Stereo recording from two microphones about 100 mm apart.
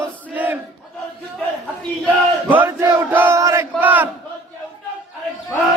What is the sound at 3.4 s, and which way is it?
Battle cry, 30° right (ahead or behind).